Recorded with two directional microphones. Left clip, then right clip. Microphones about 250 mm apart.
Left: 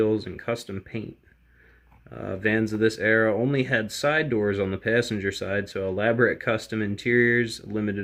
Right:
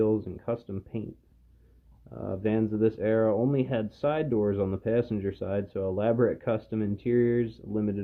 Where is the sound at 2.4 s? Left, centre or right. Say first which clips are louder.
Left 4 dB; centre.